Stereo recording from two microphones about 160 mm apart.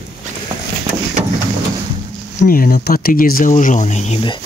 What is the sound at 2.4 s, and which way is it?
Speech, 65° left (ahead or behind).